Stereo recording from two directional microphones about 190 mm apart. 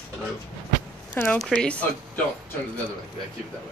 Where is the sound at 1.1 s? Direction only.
5° left (ahead or behind).